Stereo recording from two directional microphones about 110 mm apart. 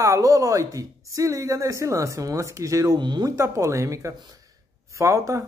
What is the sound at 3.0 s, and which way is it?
Speech, 40° right (ahead or behind).